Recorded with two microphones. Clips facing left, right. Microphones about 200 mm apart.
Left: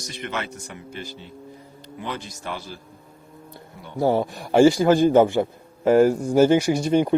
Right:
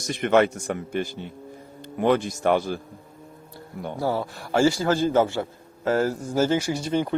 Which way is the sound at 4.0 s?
20° left (ahead or behind).